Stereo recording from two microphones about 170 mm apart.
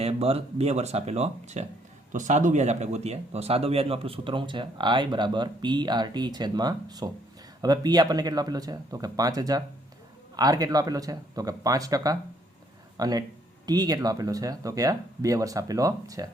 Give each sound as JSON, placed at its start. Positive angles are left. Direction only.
{"t": 0.0, "sound": "speech", "side_deg": -35}